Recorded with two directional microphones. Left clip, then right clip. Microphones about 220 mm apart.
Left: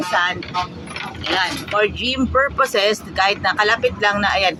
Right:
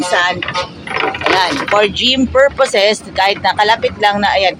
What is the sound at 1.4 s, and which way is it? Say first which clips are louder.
Speech: right 4 dB; 5° right (ahead or behind).